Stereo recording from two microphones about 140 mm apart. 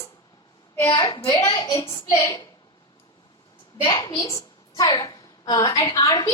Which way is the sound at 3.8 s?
25° left (ahead or behind).